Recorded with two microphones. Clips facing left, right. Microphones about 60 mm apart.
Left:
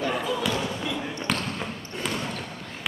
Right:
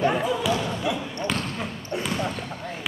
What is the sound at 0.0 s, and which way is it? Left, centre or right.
Basketball bounce, right.